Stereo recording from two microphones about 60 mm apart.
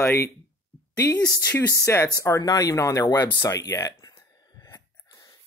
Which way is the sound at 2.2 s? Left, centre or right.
Left.